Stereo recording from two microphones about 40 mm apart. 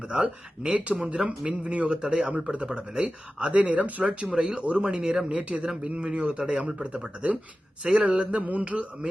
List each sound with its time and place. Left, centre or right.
0.1 s speech: right
4.0 s speech: right
5.3 s speech: right